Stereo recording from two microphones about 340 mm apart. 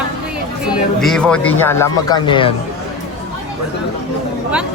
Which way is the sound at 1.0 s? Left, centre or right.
Centre.